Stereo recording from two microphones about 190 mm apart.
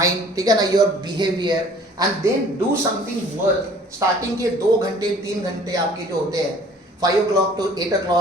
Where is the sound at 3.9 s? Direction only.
15° right (ahead or behind).